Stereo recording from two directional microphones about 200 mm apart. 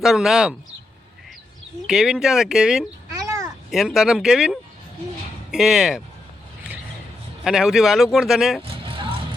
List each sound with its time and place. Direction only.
0.0 s speech: centre (ahead or behind)
1.9 s speech: 5° right (ahead or behind)
3.2 s a sound: 15° right (ahead or behind)
3.7 s speech: centre (ahead or behind)
7.4 s speech: 5° right (ahead or behind)
8.6 s vehicle: 25° right (ahead or behind)